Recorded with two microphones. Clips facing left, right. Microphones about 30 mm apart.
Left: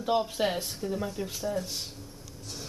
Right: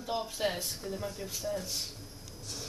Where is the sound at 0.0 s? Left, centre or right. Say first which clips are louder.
Left 6 dB; left.